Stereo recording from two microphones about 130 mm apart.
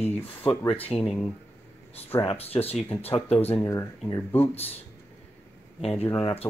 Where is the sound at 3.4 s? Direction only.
15° left (ahead or behind).